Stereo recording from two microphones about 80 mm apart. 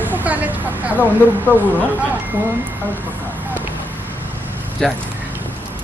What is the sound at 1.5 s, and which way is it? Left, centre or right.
Speech, left.